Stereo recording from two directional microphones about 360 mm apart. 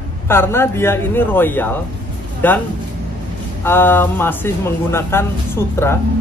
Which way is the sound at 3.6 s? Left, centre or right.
Centre.